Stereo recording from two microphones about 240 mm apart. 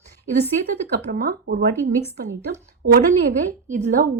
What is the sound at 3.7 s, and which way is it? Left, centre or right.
Speech, right.